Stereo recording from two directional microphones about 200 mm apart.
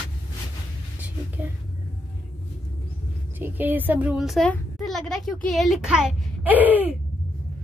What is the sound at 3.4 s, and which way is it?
Speech, 10° right (ahead or behind).